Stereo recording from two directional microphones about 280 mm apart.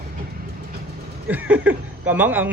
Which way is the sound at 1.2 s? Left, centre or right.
Centre.